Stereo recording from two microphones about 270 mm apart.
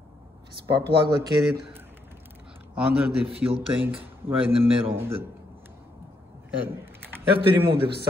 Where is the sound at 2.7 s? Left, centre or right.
Centre.